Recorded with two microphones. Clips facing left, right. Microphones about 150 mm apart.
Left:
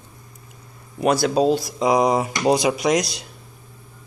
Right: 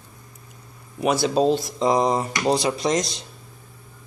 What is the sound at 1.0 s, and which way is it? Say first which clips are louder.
Speech: left 2 dB; centre (ahead or behind).